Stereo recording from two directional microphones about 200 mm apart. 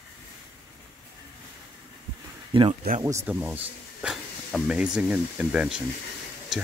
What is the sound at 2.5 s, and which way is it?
Speech, 25° right (ahead or behind).